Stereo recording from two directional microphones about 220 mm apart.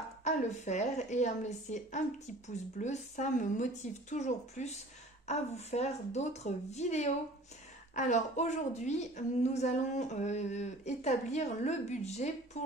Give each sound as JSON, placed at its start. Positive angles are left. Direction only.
{"t": 0.2, "sound": "a woman's voice", "side_deg": 30}